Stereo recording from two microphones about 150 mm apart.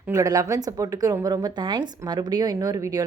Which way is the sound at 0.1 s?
20° right (ahead or behind).